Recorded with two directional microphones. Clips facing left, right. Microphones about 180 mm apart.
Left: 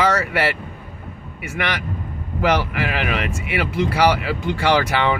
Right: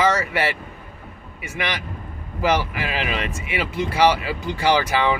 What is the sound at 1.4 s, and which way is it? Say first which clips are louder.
Speech: left 3 dB; centre (ahead or behind).